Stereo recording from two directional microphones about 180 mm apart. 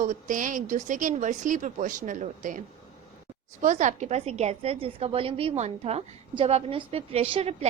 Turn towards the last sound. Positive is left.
turn(degrees=-35)  # may be behind; listen again after turning